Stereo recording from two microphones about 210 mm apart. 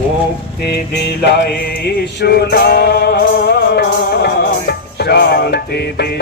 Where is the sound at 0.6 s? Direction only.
50° left (ahead or behind).